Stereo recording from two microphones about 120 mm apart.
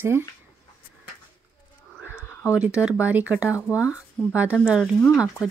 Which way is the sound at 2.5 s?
10° right (ahead or behind).